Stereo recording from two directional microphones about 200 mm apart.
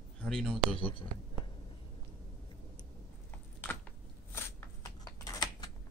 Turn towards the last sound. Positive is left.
turn(degrees=20)  # may be behind; listen again after turning